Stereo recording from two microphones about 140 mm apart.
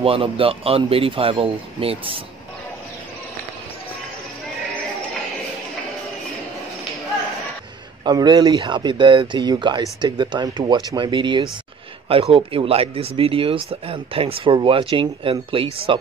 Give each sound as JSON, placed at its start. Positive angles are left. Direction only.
{"t": 0.0, "sound": "speech", "side_deg": -40}
{"t": 8.0, "sound": "speech", "side_deg": -30}